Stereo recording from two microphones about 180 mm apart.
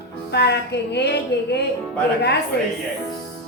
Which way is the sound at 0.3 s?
70° left (ahead or behind).